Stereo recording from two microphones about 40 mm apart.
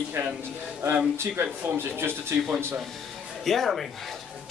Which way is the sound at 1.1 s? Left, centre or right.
Right.